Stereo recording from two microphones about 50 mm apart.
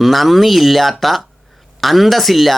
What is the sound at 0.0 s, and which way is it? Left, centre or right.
Speech, centre.